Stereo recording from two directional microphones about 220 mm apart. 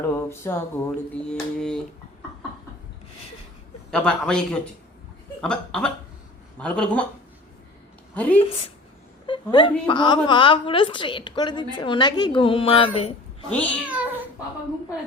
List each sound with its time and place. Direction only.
0.0 s speech: 10° left (ahead or behind)
0.9 s a sound: 5° left (ahead or behind)
3.9 s a sound: 5° left (ahead or behind)
8.1 s a woman's voice: 5° left (ahead or behind)
8.4 s a woman's voice: 25° left (ahead or behind)
13.8 s cat: 5° right (ahead or behind)